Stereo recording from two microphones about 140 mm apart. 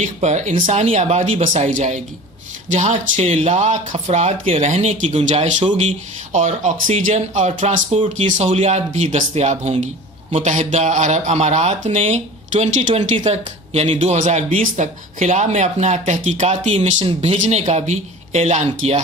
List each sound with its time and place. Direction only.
0.0 s speech: 60° right (ahead or behind)
16.7 s speech: 45° right (ahead or behind)
17.3 s speech: 60° right (ahead or behind)